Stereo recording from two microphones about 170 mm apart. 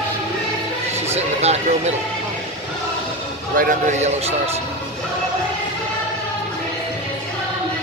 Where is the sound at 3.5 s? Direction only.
45° right (ahead or behind).